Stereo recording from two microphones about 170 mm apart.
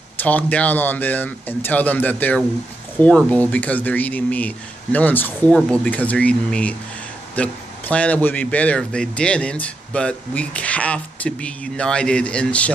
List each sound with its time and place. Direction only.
0.2 s a man's voice: 10° left (ahead or behind)